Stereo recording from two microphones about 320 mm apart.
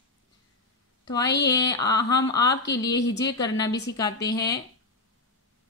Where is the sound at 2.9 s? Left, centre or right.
Left.